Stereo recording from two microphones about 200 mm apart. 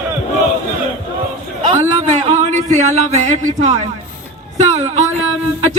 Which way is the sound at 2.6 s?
35° right (ahead or behind).